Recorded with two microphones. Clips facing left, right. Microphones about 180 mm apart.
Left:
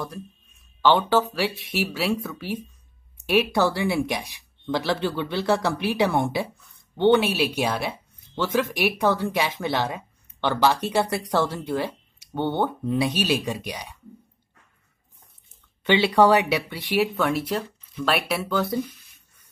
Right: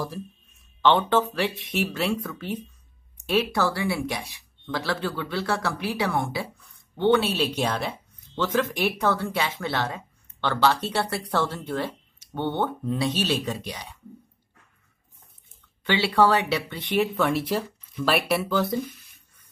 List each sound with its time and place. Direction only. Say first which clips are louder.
0.8 s speech: left 1 dB; 5° left (ahead or behind)
15.8 s speech: left 3 dB; 20° left (ahead or behind); by 18.8 s centre (ahead or behind)